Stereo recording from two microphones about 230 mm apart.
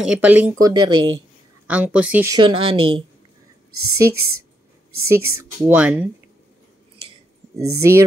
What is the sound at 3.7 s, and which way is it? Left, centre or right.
Speech, right.